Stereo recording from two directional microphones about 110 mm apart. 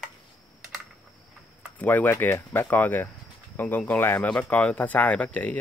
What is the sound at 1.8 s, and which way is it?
Speech, 15° left (ahead or behind).